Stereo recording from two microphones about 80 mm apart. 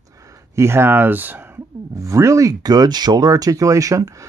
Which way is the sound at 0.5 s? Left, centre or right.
Right.